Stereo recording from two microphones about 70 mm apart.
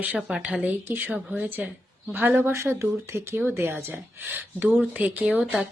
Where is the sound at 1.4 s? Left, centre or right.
Right.